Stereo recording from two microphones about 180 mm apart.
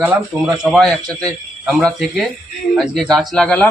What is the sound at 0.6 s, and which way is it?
Speech, centre (ahead or behind).